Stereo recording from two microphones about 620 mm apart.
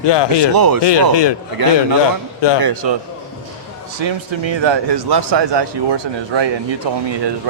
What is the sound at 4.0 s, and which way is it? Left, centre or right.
A man's voice, right.